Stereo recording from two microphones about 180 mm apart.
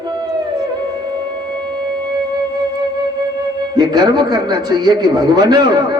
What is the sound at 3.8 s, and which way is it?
Speech, 25° right (ahead or behind).